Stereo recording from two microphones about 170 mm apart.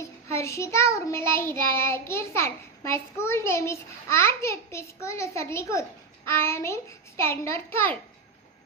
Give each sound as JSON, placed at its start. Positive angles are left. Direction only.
{"t": 0.0, "sound": "child singing", "side_deg": 15}